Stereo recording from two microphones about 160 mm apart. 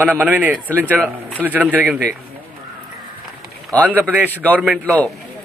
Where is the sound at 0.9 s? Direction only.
5° left (ahead or behind).